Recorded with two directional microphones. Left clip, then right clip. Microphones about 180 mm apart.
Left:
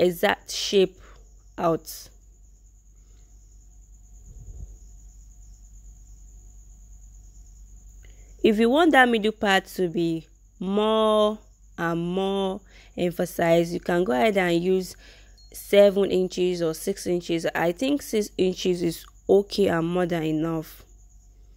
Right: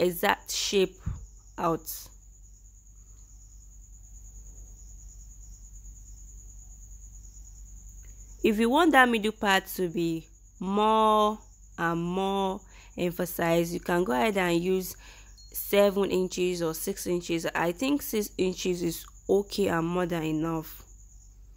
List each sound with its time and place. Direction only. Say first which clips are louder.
0.0 s speech: left 4 dB; 15° left (ahead or behind)
8.0 s speech: left 5 dB; 15° left (ahead or behind)